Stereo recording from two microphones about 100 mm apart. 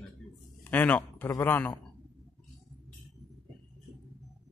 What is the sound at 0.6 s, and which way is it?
A man's voice, 15° left (ahead or behind).